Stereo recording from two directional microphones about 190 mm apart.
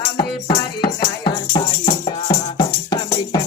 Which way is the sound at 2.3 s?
25° left (ahead or behind).